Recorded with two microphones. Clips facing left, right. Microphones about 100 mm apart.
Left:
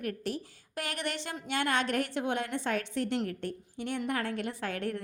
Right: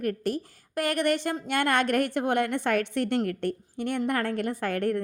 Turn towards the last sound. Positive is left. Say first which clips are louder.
# right 7 dB
turn(degrees=-55)  # may be behind; listen again after turning